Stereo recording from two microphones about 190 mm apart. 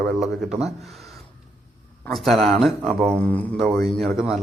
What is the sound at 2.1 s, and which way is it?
Speech, centre (ahead or behind).